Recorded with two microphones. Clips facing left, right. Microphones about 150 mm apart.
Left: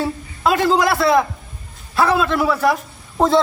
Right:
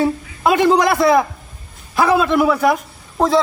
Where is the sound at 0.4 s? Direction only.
20° right (ahead or behind).